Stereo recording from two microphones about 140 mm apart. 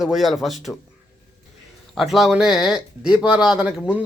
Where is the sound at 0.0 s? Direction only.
Centre (ahead or behind).